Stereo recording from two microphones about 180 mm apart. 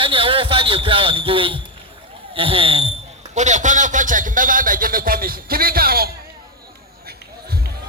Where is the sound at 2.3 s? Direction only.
30° right (ahead or behind).